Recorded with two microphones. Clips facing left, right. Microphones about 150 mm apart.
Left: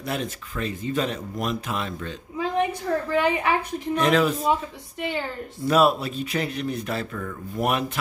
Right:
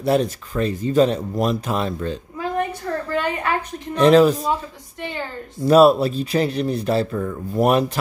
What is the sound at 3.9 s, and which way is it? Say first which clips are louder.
Speech: right 8 dB; 35° right (ahead or behind).